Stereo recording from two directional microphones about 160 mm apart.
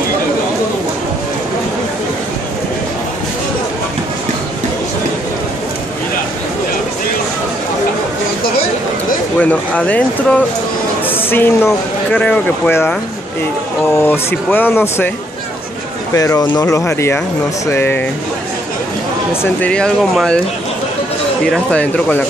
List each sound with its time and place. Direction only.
9.4 s speech: 10° left (ahead or behind)
13.9 s speech: 15° left (ahead or behind)
16.2 s speech: 20° left (ahead or behind)
19.4 s speech: 10° left (ahead or behind)
21.5 s speech: 5° left (ahead or behind)